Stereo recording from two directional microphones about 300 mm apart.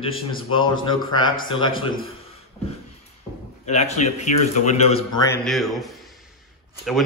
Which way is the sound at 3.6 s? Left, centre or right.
Left.